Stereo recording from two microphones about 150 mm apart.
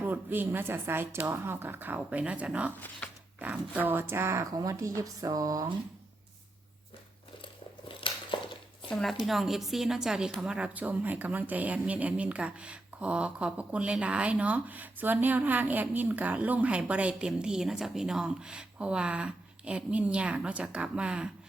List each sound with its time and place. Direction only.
0.0 s a woman's voice: 15° right (ahead or behind)
4.9 s a sound: 25° right (ahead or behind)
7.9 s biting: 35° left (ahead or behind)
8.9 s a woman's voice: 5° left (ahead or behind)